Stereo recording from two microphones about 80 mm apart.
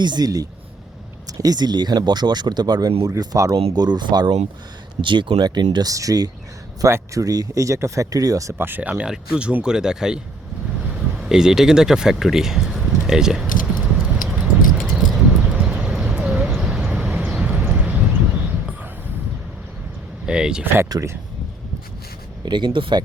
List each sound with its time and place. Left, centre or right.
0.0 s speech: right
3.8 s speech: right
4.9 s speech: right
5.9 s speech: right
6.8 s speech: right
8.5 s speech: right; by 13.5 s centre
14.0 s clip-clop: centre
14.7 s a sound: centre
16.5 s vehicle: centre
20.2 s speech: centre
20.9 s speech: right
22.4 s speech: right